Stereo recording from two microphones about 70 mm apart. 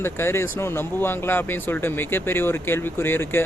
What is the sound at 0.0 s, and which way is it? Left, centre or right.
Speech, left.